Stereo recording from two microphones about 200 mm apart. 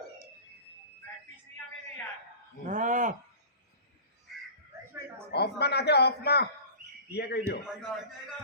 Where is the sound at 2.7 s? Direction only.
40° right (ahead or behind).